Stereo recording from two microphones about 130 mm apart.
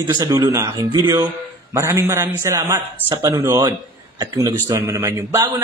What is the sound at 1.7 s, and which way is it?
Speech, 20° right (ahead or behind).